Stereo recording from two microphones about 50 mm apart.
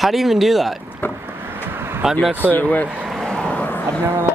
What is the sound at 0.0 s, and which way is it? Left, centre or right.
Speech, centre.